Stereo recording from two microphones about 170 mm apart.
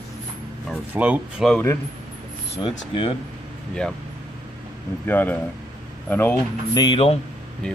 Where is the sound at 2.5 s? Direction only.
30° left (ahead or behind).